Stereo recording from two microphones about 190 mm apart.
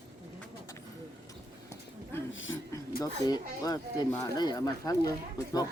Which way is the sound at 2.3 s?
90° left.